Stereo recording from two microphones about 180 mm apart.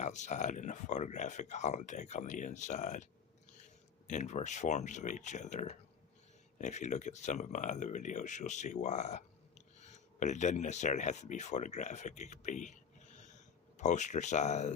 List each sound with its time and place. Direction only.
0.0 s speech: 40° left (ahead or behind)